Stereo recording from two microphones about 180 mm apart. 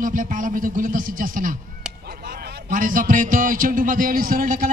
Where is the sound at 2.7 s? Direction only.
45° right (ahead or behind).